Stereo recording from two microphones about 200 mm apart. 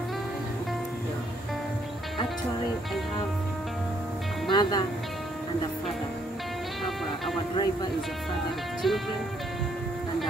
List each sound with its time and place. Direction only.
4.5 s speech: 20° left (ahead or behind)
7.5 s speech: 20° left (ahead or behind)
8.8 s music: centre (ahead or behind)